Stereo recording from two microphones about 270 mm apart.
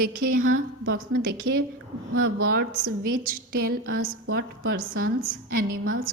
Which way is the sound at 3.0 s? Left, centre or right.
Right.